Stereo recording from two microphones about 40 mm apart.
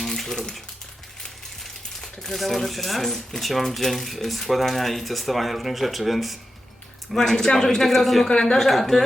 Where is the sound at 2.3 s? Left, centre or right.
Centre.